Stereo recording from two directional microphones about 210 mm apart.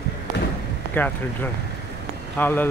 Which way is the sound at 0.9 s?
10° left (ahead or behind).